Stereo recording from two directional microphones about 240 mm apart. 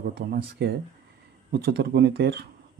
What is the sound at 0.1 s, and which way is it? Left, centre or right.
Speech, right.